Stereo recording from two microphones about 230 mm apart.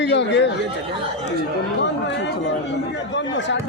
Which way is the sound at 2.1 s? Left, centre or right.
Left.